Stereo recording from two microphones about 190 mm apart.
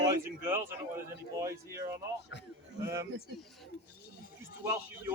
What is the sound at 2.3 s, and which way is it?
Speech, 70° left (ahead or behind).